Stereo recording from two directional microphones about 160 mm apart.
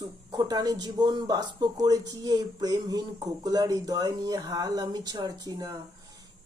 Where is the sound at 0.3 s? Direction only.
25° right (ahead or behind).